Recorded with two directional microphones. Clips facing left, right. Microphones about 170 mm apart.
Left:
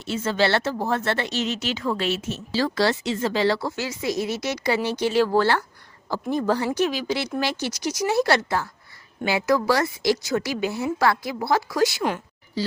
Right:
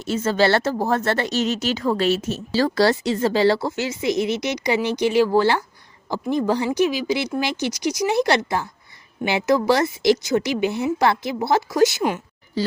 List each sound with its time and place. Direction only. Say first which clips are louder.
0.0 s a woman's voice: right 4 dB; 40° right (ahead or behind); by 12.0 s 20° right (ahead or behind)